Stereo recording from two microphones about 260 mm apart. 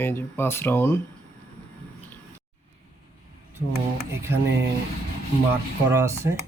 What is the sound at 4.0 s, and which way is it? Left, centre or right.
Speech, centre.